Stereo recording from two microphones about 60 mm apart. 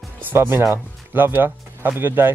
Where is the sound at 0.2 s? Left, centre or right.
Right.